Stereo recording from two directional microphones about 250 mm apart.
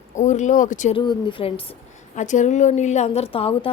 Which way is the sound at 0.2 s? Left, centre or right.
Left.